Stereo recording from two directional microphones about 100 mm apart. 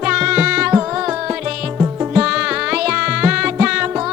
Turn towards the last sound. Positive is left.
turn(degrees=-10)  # may be behind; listen again after turning